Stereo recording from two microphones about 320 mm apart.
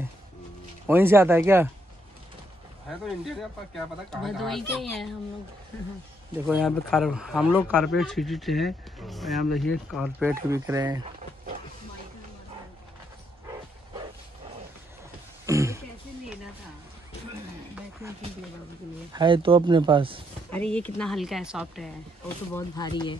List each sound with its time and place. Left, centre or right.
0.8 s speech: centre
3.3 s speech: centre
6.4 s speech: centre
15.4 s a sound: centre
19.1 s speech: centre
20.5 s speech: centre
22.5 s speech: centre